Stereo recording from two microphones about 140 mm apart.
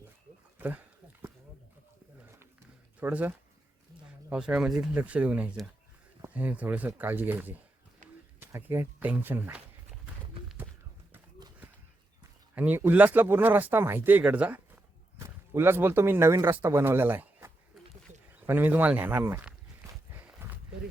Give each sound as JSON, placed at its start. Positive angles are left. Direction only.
{"t": 0.6, "sound": "a sound", "side_deg": -15}
{"t": 3.0, "sound": "speech", "side_deg": -15}
{"t": 12.5, "sound": "speech", "side_deg": -10}
{"t": 20.1, "sound": "livestock", "side_deg": -15}